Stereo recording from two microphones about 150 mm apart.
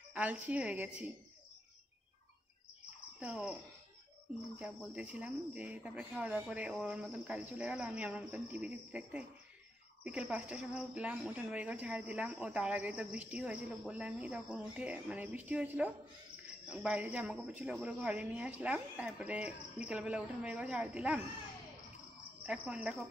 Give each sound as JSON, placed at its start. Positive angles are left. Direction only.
{"t": 0.1, "sound": "speech", "side_deg": -10}
{"t": 3.2, "sound": "speech", "side_deg": -5}
{"t": 4.6, "sound": "speech", "side_deg": -10}
{"t": 22.5, "sound": "speech", "side_deg": -5}